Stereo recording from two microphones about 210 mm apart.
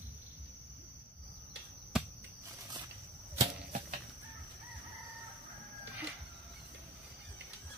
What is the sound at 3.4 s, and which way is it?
Cricket, 40° right (ahead or behind).